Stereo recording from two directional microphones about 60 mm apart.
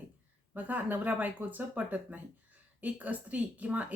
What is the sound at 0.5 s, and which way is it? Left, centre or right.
A woman's voice, right.